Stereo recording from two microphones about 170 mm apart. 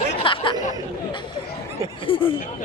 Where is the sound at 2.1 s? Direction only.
30° left (ahead or behind).